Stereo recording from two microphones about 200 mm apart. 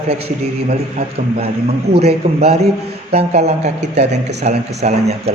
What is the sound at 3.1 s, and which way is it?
Speech, 30° right (ahead or behind).